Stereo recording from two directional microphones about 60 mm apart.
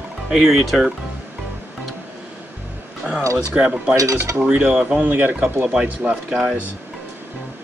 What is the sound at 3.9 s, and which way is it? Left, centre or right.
Cutlery, right.